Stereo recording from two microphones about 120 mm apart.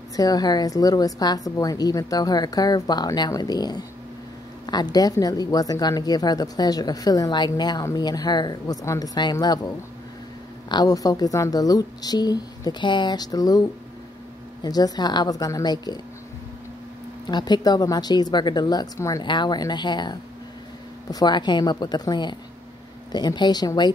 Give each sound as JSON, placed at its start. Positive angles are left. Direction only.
{"t": 0.1, "sound": "speech", "side_deg": 30}
{"t": 10.7, "sound": "speech", "side_deg": 35}
{"t": 17.3, "sound": "speech", "side_deg": 35}
{"t": 19.2, "sound": "speech", "side_deg": 40}